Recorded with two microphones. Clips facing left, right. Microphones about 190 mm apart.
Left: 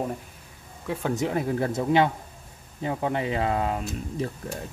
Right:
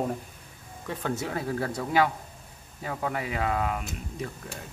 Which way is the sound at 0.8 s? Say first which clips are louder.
Left 4 dB; 15° left (ahead or behind).